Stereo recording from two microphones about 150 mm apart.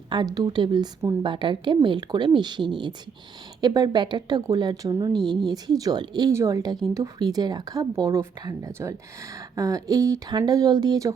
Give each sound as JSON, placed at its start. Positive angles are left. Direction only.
{"t": 0.1, "sound": "a woman's voice", "side_deg": -25}